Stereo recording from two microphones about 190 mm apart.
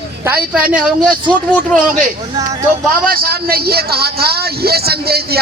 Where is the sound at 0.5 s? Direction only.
5° right (ahead or behind).